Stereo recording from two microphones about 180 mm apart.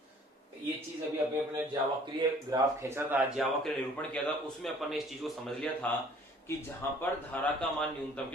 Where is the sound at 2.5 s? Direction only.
15° right (ahead or behind).